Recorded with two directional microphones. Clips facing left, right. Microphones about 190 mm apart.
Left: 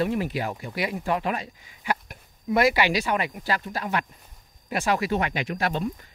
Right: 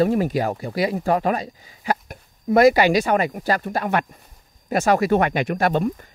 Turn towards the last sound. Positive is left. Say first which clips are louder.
# right 7 dB
turn(degrees=-50)  # may be behind; listen again after turning